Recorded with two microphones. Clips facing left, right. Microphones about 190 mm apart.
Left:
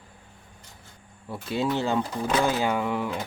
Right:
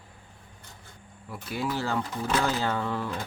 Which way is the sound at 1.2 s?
25° left (ahead or behind).